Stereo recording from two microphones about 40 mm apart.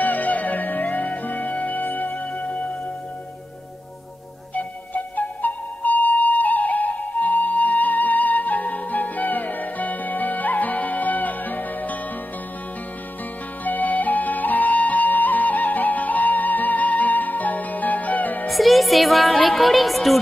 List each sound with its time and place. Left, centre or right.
0.0 s music: left
4.6 s music: left
13.7 s flute: left
18.5 s music: centre